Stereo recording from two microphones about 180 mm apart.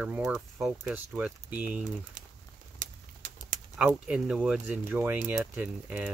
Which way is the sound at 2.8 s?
45° right (ahead or behind).